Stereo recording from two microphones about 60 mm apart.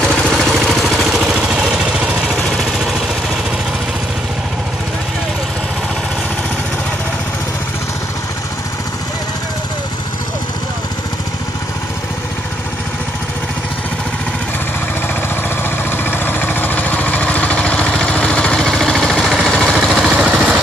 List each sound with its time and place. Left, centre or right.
0.3 s vehicle: centre
2.3 s vehicle: centre
16.1 s vehicle: left; by 20.2 s centre
20.2 s vehicle: right